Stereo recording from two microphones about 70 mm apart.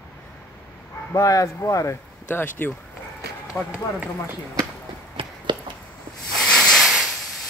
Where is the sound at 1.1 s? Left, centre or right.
Left.